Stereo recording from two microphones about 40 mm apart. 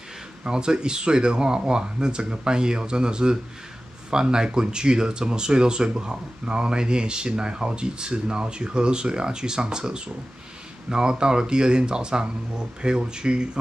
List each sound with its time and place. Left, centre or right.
0.4 s speech: right